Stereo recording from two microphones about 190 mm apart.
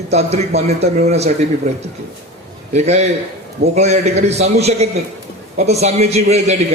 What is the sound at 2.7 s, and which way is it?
A man's voice, 35° right (ahead or behind).